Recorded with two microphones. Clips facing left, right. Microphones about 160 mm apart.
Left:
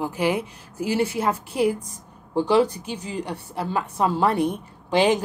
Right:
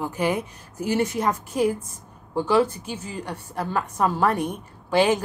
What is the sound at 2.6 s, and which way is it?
Speech, 35° left (ahead or behind).